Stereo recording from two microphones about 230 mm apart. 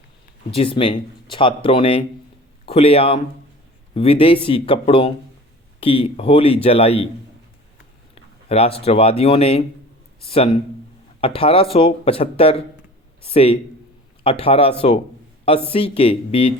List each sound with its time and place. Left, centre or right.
0.5 s a man's voice: left
8.1 s speech: left